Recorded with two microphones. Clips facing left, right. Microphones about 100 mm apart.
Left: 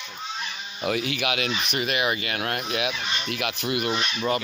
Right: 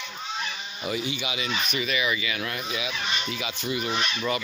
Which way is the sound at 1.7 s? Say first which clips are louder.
Left 2 dB; 55° left (ahead or behind).